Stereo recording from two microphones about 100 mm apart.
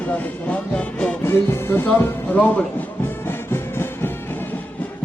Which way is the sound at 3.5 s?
25° left (ahead or behind).